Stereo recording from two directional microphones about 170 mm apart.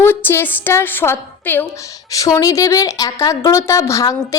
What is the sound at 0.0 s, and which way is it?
A woman's voice, 10° left (ahead or behind).